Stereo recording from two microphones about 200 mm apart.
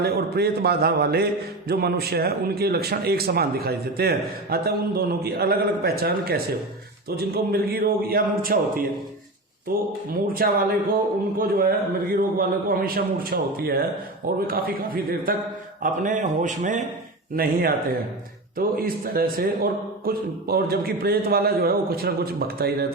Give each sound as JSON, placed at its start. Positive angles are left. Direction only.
{"t": 0.0, "sound": "speech", "side_deg": -50}